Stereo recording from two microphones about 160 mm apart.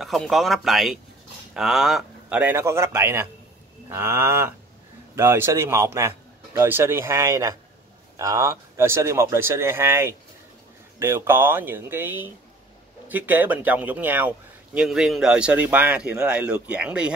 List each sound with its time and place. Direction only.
0.0 s a man's voice: centre (ahead or behind)